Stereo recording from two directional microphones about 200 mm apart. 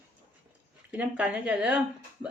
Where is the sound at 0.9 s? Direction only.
5° right (ahead or behind).